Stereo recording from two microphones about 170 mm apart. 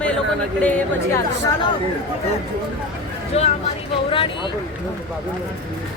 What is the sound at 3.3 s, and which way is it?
Speech, 40° left (ahead or behind).